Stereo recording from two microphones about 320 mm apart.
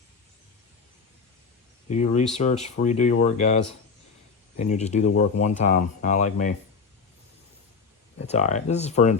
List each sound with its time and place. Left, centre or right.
1.9 s speech: left
8.3 s speech: left